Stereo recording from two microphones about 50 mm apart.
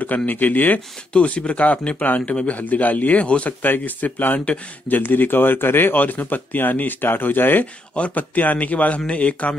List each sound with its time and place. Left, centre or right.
0.3 s a man's voice: left
3.6 s speech: left
7.9 s a man's voice: left